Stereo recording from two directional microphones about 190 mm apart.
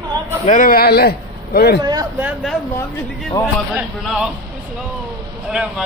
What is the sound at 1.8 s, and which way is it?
Speech, 20° right (ahead or behind).